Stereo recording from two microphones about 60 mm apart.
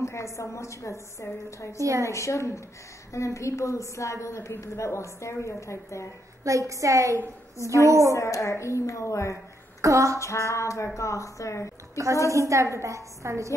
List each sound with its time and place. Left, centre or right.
0.0 s a woman's voice: left
1.8 s a woman's voice: right
2.0 s a woman's voice: left
6.4 s a woman's voice: right
8.1 s a woman's voice: left
9.8 s a sound: right
10.1 s a woman's voice: left
12.3 s a woman's voice: right